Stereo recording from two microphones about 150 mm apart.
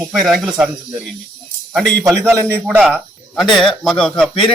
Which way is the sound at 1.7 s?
5° left (ahead or behind).